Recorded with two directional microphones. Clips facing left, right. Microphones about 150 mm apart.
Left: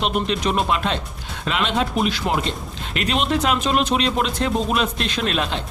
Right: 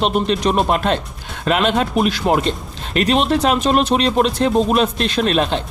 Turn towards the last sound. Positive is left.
turn(degrees=-35)  # may be behind; listen again after turning